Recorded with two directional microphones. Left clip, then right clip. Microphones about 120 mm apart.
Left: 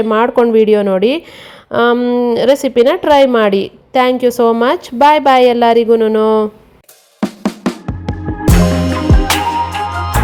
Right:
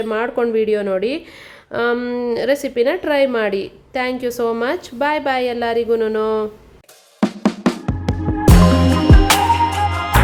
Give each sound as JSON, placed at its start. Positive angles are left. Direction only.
{"t": 0.1, "sound": "a woman's voice", "side_deg": 45}
{"t": 2.0, "sound": "speech", "side_deg": 25}
{"t": 2.3, "sound": "a woman's voice", "side_deg": 40}
{"t": 7.2, "sound": "music", "side_deg": 5}